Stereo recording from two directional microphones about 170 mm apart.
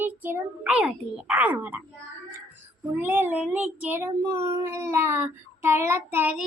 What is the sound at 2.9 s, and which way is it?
Child singing, 10° right (ahead or behind).